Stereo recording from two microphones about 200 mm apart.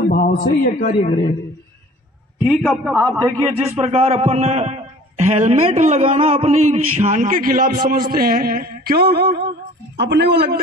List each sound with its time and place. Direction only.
0.7 s speech: 45° left (ahead or behind)
1.0 s a man's voice: 30° left (ahead or behind)
2.4 s a man's voice: centre (ahead or behind)
3.3 s a man's voice: 10° right (ahead or behind)
3.7 s a man's voice: 30° right (ahead or behind); by 10.6 s 55° right (ahead or behind)